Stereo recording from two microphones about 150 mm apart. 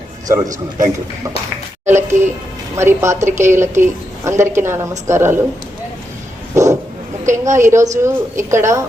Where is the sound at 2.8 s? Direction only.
20° right (ahead or behind).